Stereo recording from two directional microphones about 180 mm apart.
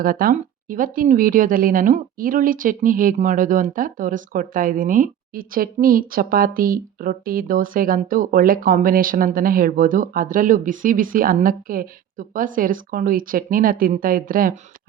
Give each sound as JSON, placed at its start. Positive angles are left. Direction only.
{"t": 0.0, "sound": "a woman's voice", "side_deg": -50}